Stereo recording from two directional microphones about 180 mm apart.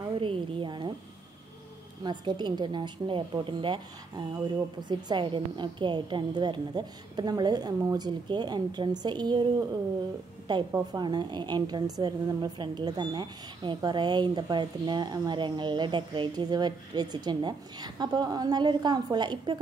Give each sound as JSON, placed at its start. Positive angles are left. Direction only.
{"t": 0.2, "sound": "a sound", "side_deg": -30}
{"t": 2.0, "sound": "a woman's voice", "side_deg": -25}
{"t": 10.7, "sound": "a woman's voice", "side_deg": -25}